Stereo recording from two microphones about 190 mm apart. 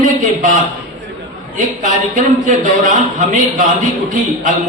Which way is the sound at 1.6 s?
40° right (ahead or behind).